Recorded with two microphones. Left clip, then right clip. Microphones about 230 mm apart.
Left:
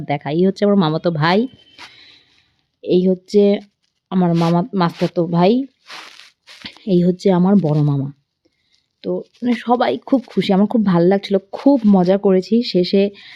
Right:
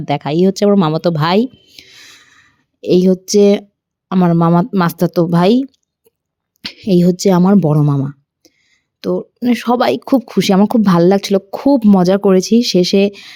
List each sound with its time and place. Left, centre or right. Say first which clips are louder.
0.0 s speech: right 4 dB; centre
7.7 s a sound: right 4 dB; centre
9.0 s speech: right 5 dB; centre